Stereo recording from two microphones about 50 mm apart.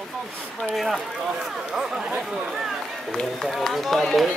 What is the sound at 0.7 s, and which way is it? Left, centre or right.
Speech, centre.